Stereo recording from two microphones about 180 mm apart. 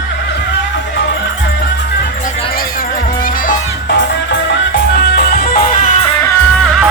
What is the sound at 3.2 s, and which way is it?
Music, 50° left (ahead or behind).